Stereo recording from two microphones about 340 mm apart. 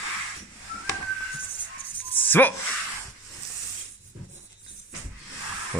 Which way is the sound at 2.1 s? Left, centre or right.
Centre.